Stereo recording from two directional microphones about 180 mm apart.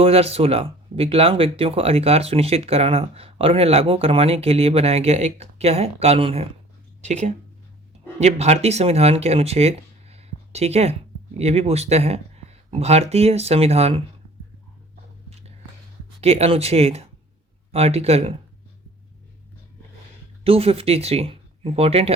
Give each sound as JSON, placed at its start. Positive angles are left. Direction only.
{"t": 0.0, "sound": "speech", "side_deg": -35}
{"t": 16.2, "sound": "speech", "side_deg": -35}
{"t": 20.4, "sound": "speech", "side_deg": -35}